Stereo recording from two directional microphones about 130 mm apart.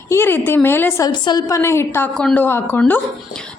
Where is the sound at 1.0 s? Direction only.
30° left (ahead or behind).